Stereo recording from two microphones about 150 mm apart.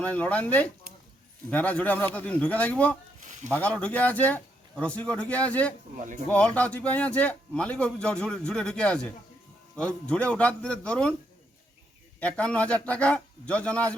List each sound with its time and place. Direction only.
0.0 s a man's voice: 10° left (ahead or behind)
12.2 s a man's voice: 10° left (ahead or behind)